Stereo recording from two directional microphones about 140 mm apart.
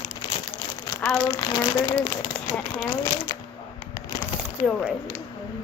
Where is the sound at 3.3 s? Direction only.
30° left (ahead or behind).